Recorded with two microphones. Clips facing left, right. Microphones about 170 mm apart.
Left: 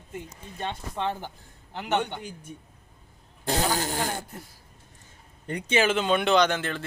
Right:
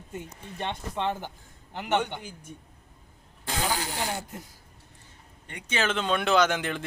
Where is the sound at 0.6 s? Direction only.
20° right (ahead or behind).